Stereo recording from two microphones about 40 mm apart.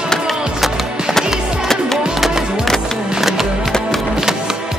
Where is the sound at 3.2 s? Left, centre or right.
Centre.